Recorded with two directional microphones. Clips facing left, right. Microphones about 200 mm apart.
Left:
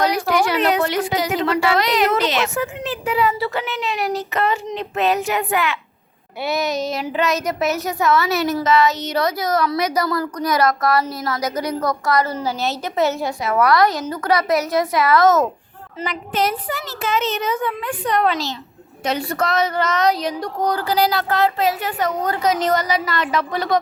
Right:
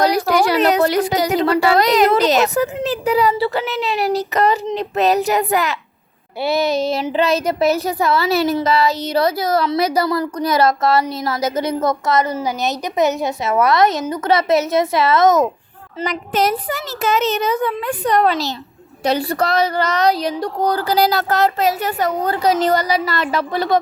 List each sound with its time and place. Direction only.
0.0 s a woman's voice: 35° right (ahead or behind); by 15.4 s 20° right (ahead or behind)
16.0 s a woman's voice: 40° right (ahead or behind)